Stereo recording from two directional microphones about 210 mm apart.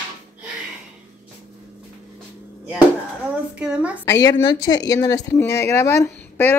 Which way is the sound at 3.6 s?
5° right (ahead or behind).